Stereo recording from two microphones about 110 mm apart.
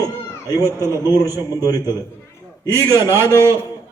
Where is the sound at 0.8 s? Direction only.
25° right (ahead or behind).